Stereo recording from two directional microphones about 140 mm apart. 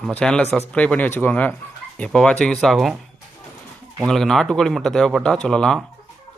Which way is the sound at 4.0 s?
Centre (ahead or behind).